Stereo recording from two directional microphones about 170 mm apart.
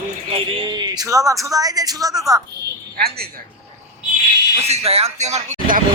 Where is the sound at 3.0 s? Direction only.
65° right (ahead or behind).